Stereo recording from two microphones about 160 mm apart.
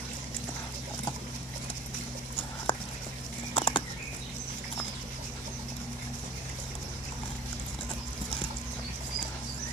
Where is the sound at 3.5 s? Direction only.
30° left (ahead or behind).